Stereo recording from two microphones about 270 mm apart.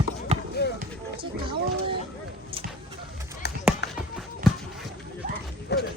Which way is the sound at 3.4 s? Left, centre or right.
Left.